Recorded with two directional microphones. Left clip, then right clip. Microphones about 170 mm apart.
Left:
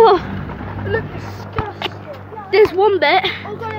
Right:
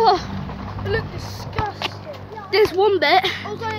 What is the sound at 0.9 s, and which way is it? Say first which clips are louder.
Speech: left 3 dB; 40° right (ahead or behind).